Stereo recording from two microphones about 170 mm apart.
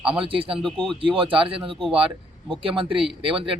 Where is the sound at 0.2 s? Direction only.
30° right (ahead or behind).